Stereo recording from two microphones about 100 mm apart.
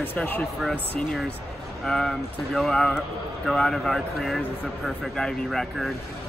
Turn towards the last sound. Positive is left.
turn(degrees=5)  # may be behind; listen again after turning